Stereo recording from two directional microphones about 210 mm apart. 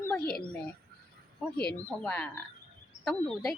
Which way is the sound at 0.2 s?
45° left (ahead or behind).